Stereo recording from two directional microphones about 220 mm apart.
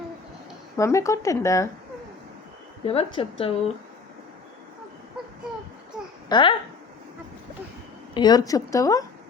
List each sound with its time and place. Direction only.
0.8 s a woman's voice: 15° left (ahead or behind)
2.8 s a woman's voice: 25° left (ahead or behind)
6.2 s a child's voice: 20° left (ahead or behind)
8.1 s a woman's voice: 20° left (ahead or behind)